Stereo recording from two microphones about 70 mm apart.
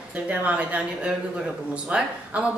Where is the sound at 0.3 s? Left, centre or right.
Centre.